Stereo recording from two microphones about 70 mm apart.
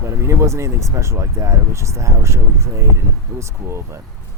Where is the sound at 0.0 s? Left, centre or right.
Right.